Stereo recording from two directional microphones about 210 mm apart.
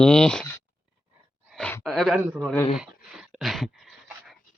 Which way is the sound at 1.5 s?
5° left (ahead or behind).